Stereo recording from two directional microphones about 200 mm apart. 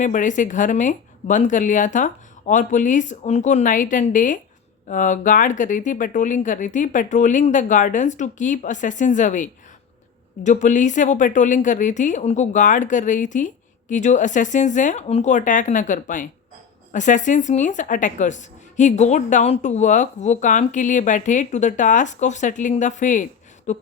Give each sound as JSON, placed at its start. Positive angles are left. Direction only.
{"t": 0.0, "sound": "a woman's voice", "side_deg": 40}